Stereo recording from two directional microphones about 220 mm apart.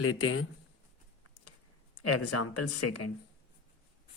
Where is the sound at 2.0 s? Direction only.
90° left.